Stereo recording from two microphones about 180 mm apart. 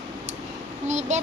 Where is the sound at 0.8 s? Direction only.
40° right (ahead or behind).